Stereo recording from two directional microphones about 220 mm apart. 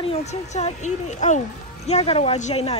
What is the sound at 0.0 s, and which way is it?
A woman's voice, 30° left (ahead or behind).